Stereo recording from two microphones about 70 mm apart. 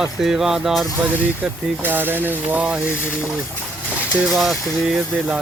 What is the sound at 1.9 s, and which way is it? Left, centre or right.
Speech, right.